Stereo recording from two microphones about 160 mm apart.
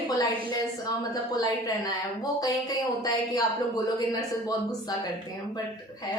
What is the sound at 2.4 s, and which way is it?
A woman's voice, 25° left (ahead or behind).